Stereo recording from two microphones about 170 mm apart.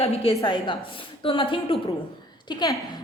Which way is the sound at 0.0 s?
35° left (ahead or behind).